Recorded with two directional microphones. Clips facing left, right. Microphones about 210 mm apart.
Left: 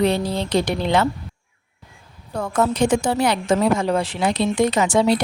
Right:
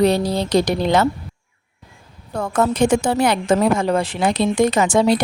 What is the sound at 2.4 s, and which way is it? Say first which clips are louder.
A woman's voice: right 2 dB; 50° right (ahead or behind).